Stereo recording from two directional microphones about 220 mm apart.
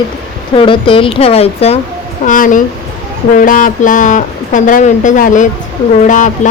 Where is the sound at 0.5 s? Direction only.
25° left (ahead or behind).